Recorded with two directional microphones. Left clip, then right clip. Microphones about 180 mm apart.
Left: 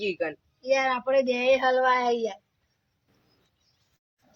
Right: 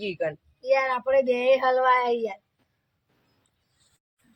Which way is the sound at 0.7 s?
30° right (ahead or behind).